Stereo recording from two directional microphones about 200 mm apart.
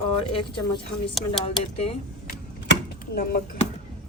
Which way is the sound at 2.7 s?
50° left (ahead or behind).